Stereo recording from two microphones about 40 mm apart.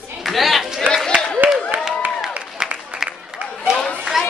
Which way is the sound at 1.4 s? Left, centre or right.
Right.